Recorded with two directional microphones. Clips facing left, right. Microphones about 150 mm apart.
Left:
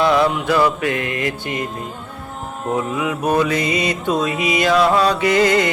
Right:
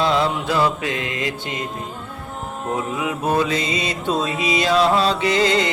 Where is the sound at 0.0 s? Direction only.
20° right (ahead or behind).